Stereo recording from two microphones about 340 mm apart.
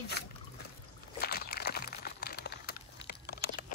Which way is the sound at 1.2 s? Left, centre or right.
Left.